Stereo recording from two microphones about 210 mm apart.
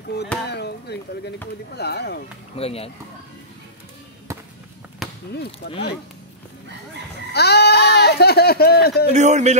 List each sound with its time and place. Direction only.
0.1 s speech: 50° left (ahead or behind)
2.5 s speech: 30° left (ahead or behind)
4.3 s music: 15° right (ahead or behind)
5.3 s speech: 50° left (ahead or behind)
5.7 s speech: 25° left (ahead or behind)
7.3 s speech: 50° left (ahead or behind)
9.1 s a man's voice: 35° right (ahead or behind)